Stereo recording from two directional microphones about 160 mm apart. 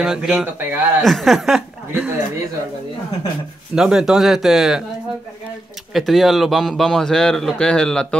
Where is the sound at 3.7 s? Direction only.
5° right (ahead or behind).